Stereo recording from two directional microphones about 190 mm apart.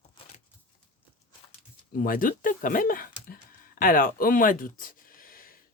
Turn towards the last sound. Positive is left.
turn(degrees=50)  # may be behind; listen again after turning